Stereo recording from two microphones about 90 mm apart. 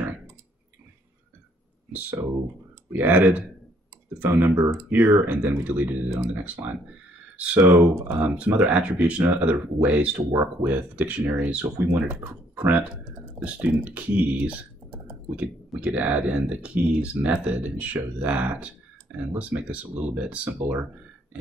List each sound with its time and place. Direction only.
1.9 s speech: 20° right (ahead or behind)